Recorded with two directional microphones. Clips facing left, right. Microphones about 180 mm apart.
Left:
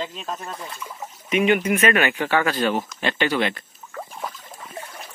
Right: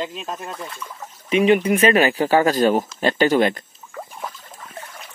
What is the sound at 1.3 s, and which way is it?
Speech, 35° right (ahead or behind).